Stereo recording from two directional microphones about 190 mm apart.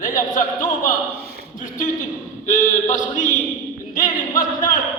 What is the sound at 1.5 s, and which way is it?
Speech, 45° left (ahead or behind).